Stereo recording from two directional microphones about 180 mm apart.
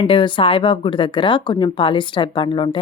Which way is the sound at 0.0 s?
30° left (ahead or behind).